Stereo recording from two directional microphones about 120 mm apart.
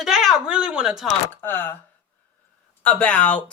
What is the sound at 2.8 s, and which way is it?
Speech, 10° left (ahead or behind).